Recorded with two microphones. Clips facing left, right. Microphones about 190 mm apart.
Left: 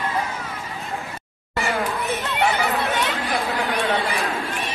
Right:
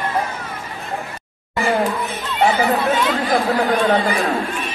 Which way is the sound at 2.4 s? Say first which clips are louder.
Right 6 dB; 35° right (ahead or behind).